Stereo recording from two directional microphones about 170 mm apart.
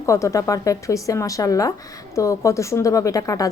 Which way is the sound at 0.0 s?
15° left (ahead or behind).